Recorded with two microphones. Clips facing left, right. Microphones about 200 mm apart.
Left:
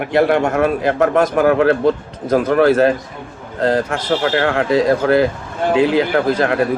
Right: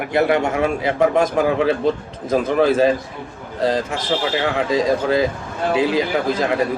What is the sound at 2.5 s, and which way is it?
Speech, 90° left.